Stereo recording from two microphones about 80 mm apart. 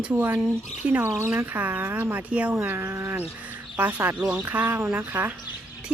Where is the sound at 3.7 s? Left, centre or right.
Centre.